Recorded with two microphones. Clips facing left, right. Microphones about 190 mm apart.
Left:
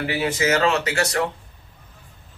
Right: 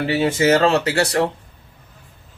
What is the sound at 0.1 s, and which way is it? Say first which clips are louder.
Speech: right 6 dB; 30° right (ahead or behind).